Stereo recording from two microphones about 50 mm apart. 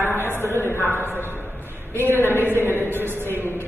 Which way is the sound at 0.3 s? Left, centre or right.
Right.